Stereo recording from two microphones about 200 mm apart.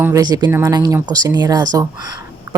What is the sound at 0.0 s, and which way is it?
A woman's voice, 15° right (ahead or behind).